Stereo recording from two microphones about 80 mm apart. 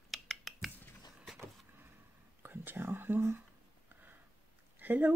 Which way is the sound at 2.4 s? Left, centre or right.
Right.